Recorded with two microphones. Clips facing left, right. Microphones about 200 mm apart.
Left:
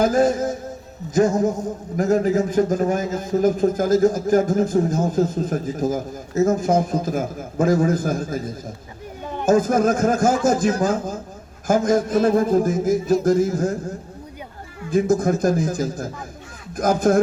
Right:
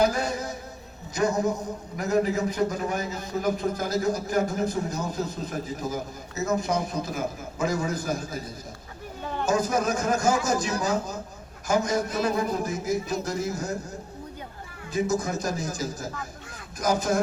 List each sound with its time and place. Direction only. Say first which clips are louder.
0.0 s a man's voice: left 7 dB; 50° left (ahead or behind)
9.2 s a sound: left 2 dB; 15° left (ahead or behind)
9.5 s a man's voice: left 8 dB; 50° left (ahead or behind)